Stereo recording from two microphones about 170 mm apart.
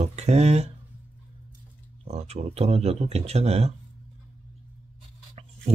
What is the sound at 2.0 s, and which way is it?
Speech, 40° right (ahead or behind).